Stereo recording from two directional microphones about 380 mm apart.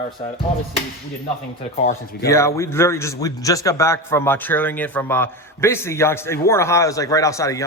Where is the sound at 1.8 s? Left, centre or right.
Left.